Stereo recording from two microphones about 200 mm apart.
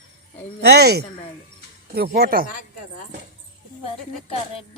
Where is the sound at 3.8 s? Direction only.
30° left (ahead or behind).